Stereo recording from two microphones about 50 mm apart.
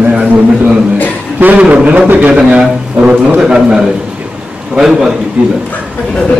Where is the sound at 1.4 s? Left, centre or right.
Right; by 5.1 s centre.